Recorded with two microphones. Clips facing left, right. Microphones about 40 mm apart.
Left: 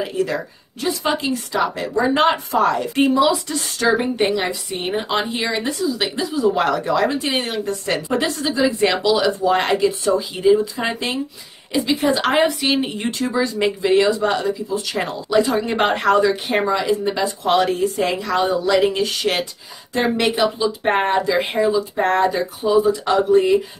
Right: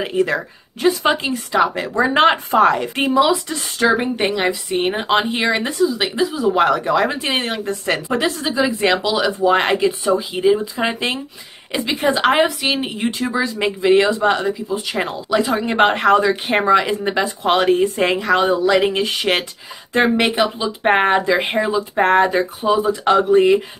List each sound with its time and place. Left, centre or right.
0.0 s speech: right
3.0 s speech: centre
5.6 s speech: centre
11.8 s speech: right
12.1 s speech: centre
19.9 s speech: right
20.2 s speech: centre
20.8 s speech: right
21.6 s speech: right